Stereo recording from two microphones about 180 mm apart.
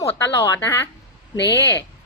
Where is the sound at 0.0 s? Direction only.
15° left (ahead or behind).